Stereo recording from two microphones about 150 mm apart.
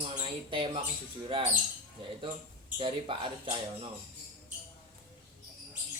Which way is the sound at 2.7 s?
35° right (ahead or behind).